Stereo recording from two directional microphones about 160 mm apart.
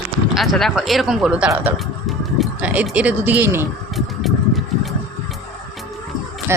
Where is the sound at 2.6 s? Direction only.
10° right (ahead or behind).